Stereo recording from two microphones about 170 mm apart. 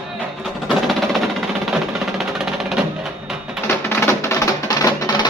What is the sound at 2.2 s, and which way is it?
Music, 5° right (ahead or behind).